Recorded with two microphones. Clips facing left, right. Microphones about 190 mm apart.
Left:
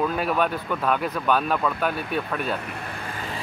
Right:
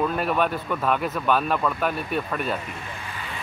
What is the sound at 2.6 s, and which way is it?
Vehicle, 55° left (ahead or behind).